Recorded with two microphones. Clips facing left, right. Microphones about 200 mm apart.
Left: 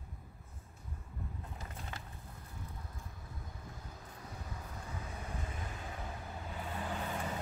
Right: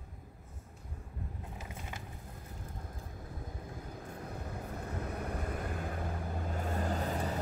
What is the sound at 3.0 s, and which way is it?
Vehicle, 50° right (ahead or behind).